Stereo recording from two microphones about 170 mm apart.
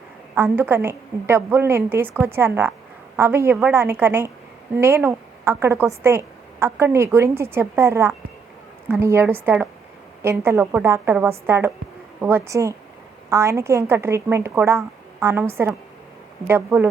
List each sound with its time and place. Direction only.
0.3 s a woman's voice: 10° right (ahead or behind)